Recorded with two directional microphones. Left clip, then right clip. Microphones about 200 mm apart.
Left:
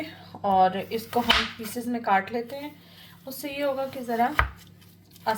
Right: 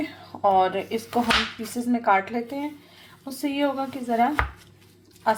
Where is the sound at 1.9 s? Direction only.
25° right (ahead or behind).